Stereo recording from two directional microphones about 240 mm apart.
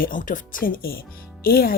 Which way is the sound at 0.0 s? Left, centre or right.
Left.